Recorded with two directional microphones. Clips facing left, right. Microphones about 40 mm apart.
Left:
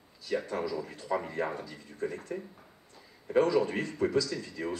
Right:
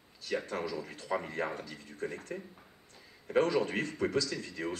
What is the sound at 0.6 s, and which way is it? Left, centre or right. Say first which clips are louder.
Speech: left 3 dB; right.